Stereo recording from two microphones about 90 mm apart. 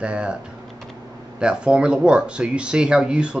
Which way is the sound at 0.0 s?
10° right (ahead or behind).